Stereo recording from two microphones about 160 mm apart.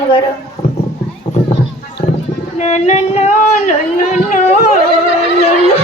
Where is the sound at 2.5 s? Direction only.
45° left (ahead or behind).